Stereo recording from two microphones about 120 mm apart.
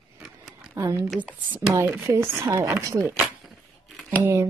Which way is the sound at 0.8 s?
25° right (ahead or behind).